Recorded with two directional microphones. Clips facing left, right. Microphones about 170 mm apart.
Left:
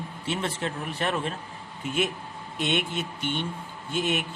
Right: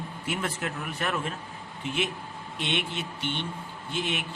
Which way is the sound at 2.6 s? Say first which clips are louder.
Left 4 dB; 45° left (ahead or behind).